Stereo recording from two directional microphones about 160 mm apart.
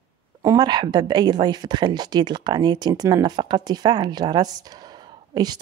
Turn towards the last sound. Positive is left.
turn(degrees=-25)  # may be behind; listen again after turning